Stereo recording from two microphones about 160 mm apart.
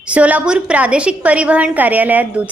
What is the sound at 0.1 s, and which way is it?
A woman's voice, 10° right (ahead or behind).